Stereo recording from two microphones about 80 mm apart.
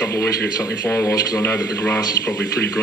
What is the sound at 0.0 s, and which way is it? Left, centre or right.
Speech, left.